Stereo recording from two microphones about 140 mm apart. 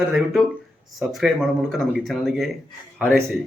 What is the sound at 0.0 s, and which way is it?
Speech, 5° right (ahead or behind).